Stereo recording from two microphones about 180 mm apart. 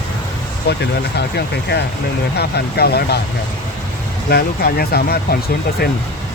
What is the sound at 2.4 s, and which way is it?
Speech, 65° left (ahead or behind).